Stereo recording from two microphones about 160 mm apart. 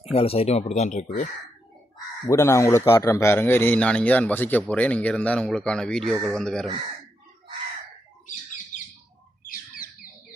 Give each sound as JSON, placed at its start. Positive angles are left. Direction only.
{"t": 0.0, "sound": "speech", "side_deg": 40}
{"t": 2.2, "sound": "a man's voice", "side_deg": 20}